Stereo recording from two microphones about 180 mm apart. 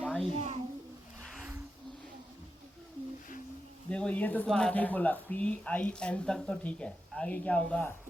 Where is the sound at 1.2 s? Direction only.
Centre (ahead or behind).